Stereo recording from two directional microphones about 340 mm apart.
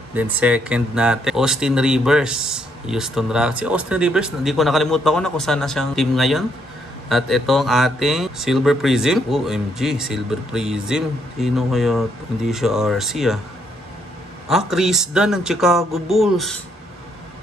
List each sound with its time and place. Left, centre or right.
0.1 s speech: centre
14.5 s speech: centre